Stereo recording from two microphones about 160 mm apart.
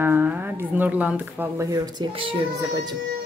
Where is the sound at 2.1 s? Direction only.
35° right (ahead or behind).